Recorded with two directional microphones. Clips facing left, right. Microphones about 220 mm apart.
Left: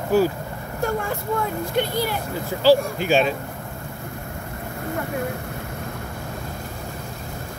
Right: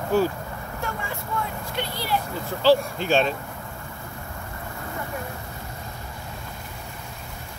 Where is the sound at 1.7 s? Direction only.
50° left (ahead or behind).